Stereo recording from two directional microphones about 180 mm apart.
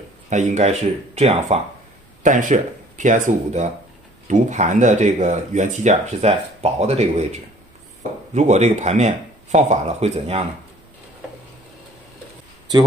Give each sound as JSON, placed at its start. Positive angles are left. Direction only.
{"t": 0.3, "sound": "speech", "side_deg": -40}